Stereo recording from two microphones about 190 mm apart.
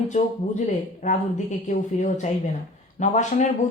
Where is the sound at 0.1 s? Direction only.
40° left (ahead or behind).